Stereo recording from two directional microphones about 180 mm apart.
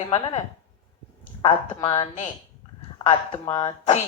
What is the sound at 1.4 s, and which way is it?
Speech, 30° left (ahead or behind).